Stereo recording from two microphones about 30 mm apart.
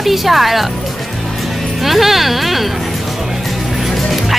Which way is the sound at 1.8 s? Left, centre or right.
Centre.